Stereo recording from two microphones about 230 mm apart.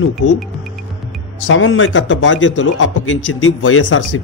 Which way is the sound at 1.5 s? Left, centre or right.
Left.